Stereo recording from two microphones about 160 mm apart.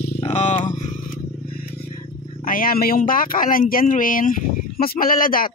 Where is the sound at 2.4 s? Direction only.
65° left (ahead or behind).